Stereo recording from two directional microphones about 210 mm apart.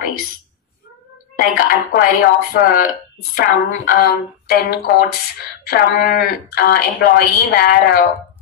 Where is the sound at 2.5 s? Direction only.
45° left (ahead or behind).